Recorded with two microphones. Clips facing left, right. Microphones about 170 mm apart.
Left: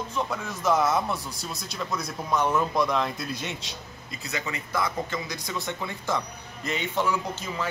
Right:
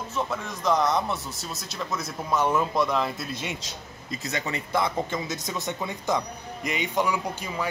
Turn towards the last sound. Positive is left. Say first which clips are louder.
# right 1 dB
turn(degrees=-10)  # may be behind; listen again after turning